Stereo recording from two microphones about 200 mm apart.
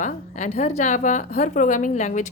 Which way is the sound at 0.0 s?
35° left (ahead or behind).